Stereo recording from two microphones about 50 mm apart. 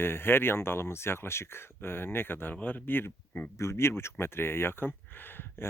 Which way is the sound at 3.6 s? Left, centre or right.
Left.